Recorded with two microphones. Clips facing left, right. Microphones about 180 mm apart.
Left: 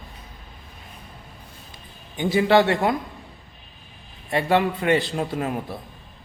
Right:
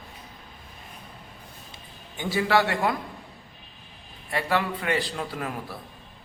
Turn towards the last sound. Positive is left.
turn(degrees=25)  # may be behind; listen again after turning